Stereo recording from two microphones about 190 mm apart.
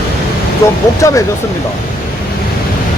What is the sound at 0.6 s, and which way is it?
Speech, 15° left (ahead or behind).